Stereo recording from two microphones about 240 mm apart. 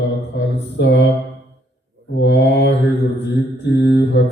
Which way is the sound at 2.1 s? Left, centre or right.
Left.